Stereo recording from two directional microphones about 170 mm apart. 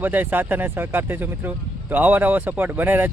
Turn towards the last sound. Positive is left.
turn(degrees=-10)  # may be behind; listen again after turning